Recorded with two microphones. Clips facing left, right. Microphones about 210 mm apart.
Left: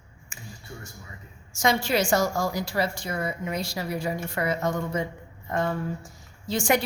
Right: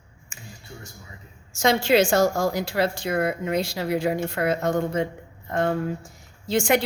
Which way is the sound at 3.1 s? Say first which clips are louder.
Right 6 dB; 60° right (ahead or behind).